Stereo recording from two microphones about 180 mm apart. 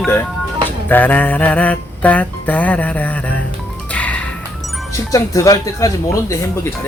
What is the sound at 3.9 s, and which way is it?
Music, 10° left (ahead or behind).